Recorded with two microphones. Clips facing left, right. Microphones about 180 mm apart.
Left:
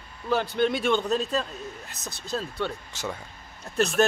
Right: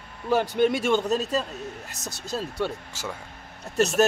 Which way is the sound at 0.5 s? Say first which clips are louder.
Right 1 dB; 10° right (ahead or behind).